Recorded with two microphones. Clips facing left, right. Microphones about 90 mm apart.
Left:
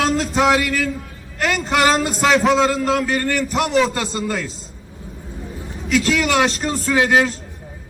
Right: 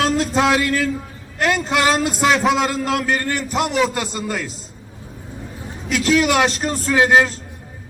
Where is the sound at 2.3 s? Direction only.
5° right (ahead or behind).